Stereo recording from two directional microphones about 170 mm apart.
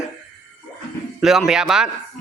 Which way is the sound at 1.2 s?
Centre (ahead or behind).